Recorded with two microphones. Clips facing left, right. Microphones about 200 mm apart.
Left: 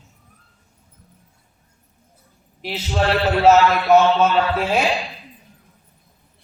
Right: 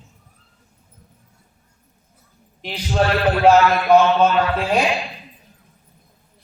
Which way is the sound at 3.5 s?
5° left (ahead or behind).